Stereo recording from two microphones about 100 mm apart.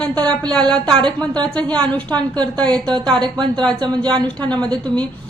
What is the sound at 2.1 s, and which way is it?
Speech, 45° right (ahead or behind).